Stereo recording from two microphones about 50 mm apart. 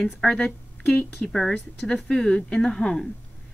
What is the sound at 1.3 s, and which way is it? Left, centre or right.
A woman's voice, centre.